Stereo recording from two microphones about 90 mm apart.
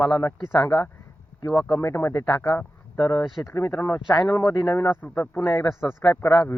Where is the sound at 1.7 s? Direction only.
30° left (ahead or behind).